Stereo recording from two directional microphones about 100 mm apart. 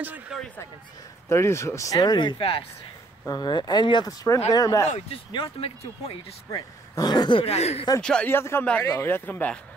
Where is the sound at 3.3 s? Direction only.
45° left (ahead or behind).